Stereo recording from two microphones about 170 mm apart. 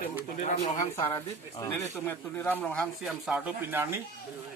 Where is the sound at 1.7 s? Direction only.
15° left (ahead or behind).